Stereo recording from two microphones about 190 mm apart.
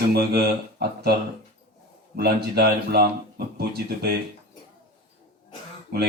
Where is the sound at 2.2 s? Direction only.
55° right (ahead or behind).